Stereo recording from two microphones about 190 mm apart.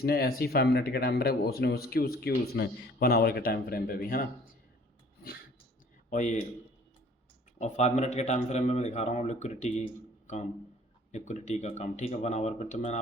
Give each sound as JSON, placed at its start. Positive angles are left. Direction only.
{"t": 0.0, "sound": "speech", "side_deg": 55}
{"t": 6.1, "sound": "a man's voice", "side_deg": 40}
{"t": 7.6, "sound": "a man's voice", "side_deg": 35}